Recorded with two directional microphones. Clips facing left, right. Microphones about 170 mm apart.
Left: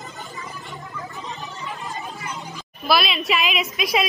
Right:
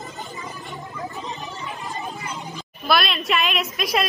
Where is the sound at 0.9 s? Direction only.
20° right (ahead or behind).